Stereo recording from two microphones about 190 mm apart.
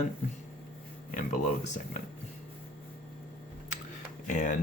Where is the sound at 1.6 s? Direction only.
40° left (ahead or behind).